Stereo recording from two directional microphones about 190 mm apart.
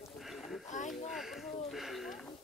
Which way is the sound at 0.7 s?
40° left (ahead or behind).